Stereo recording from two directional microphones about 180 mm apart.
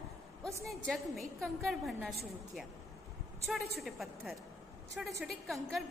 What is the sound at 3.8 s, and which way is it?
A woman's voice, centre (ahead or behind).